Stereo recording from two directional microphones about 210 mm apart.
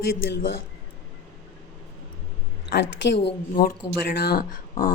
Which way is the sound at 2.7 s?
55° left (ahead or behind).